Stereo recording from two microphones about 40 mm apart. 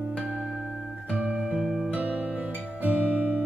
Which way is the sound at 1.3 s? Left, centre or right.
Centre.